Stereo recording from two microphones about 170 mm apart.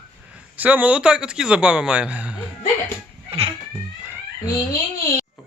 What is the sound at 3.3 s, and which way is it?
Cat, 35° right (ahead or behind).